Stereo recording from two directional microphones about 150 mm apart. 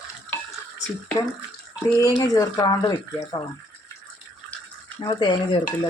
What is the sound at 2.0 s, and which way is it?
Speech, 25° left (ahead or behind).